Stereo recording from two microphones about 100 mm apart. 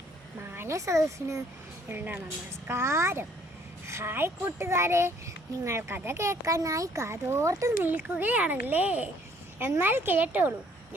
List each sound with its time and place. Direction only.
0.5 s speech: 25° right (ahead or behind)
1.9 s a child's voice: 20° right (ahead or behind)
7.9 s a child's voice: 15° right (ahead or behind)